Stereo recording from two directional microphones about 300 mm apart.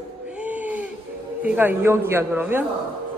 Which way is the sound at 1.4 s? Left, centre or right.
Centre.